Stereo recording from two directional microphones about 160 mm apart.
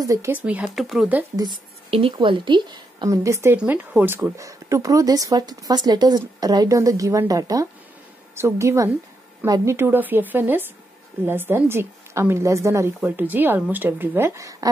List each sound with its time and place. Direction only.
0.0 s a woman's voice: 20° right (ahead or behind)
1.3 s a woman's voice: 25° right (ahead or behind)